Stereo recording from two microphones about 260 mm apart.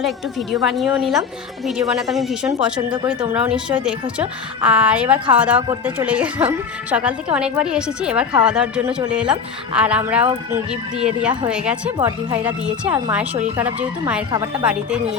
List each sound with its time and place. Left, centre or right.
0.5 s a woman's voice: centre
11.9 s speech: centre
12.4 s a woman's voice: centre